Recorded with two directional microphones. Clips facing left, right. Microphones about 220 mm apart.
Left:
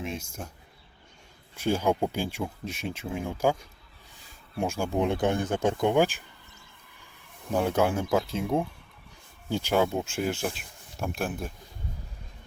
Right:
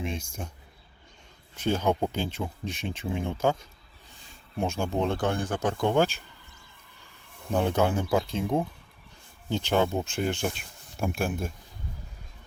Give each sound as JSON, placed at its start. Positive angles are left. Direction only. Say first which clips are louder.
{"t": 0.0, "sound": "speech", "louder": "right 1 dB", "side_deg": 5}
{"t": 1.5, "sound": "speech", "louder": "even", "side_deg": 10}
{"t": 7.5, "sound": "speech", "louder": "even", "side_deg": 5}